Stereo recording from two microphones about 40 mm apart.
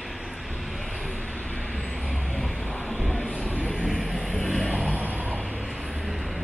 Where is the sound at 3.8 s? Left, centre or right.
Centre.